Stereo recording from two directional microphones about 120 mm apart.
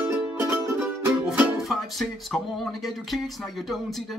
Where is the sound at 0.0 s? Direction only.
15° right (ahead or behind).